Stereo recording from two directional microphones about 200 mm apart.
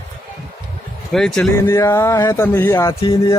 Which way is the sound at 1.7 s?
15° left (ahead or behind).